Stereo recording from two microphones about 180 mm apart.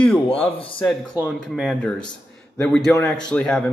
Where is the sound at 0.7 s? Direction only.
5° left (ahead or behind).